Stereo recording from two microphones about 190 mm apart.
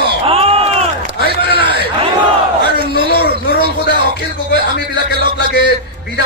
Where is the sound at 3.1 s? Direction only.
55° left (ahead or behind).